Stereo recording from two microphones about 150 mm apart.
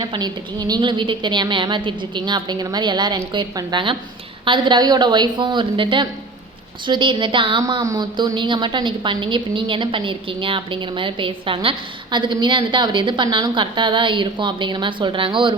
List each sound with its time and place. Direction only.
0.0 s a woman's voice: 25° right (ahead or behind)